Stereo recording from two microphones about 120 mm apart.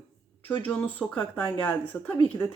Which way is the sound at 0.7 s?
15° left (ahead or behind).